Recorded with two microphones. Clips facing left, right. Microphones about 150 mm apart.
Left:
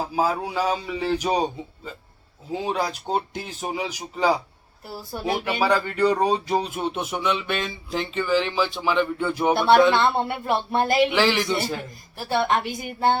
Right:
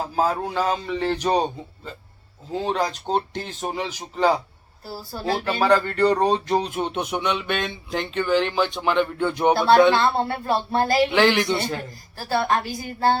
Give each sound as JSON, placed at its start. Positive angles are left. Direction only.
{"t": 0.2, "sound": "speech", "side_deg": 10}
{"t": 9.9, "sound": "a woman's voice", "side_deg": 20}
{"t": 11.1, "sound": "speech", "side_deg": 0}
{"t": 12.1, "sound": "a woman's voice", "side_deg": 20}